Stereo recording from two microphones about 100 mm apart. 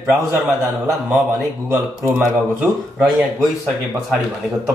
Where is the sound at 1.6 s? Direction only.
30° right (ahead or behind).